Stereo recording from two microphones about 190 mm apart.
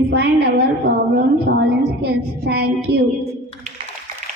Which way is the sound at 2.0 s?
60° right (ahead or behind).